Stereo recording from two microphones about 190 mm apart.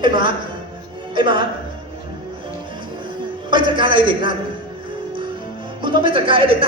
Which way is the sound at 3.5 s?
25° right (ahead or behind).